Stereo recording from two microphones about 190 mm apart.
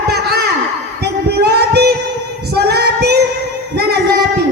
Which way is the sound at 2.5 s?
60° right (ahead or behind).